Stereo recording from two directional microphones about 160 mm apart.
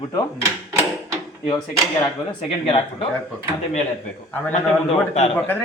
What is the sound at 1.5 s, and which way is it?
Speech, 25° left (ahead or behind).